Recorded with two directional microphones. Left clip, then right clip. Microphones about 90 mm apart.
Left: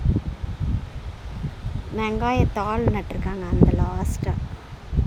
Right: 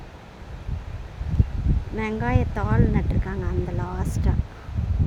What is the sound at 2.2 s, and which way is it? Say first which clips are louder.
Speech: left 6 dB; 15° left (ahead or behind).